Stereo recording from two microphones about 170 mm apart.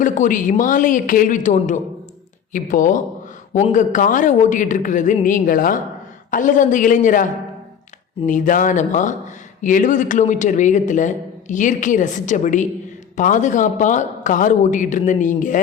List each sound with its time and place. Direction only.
0.0 s a man's voice: 50° left (ahead or behind)
8.3 s a man's voice: 50° left (ahead or behind)